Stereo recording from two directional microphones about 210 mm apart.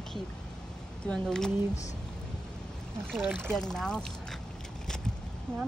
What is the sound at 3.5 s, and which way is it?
Speech, 5° left (ahead or behind).